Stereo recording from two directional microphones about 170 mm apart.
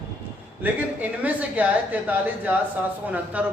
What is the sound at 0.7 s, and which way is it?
Speech, 10° right (ahead or behind).